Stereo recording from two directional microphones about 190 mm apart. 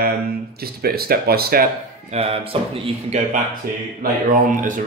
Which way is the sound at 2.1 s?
30° right (ahead or behind).